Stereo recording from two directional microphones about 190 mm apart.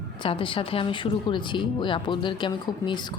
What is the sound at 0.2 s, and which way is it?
Speech, 25° left (ahead or behind).